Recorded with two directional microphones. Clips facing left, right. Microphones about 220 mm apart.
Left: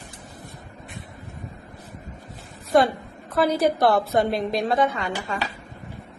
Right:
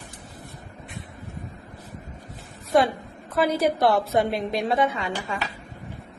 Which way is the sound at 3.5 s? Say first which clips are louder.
Left 1 dB; 35° left (ahead or behind).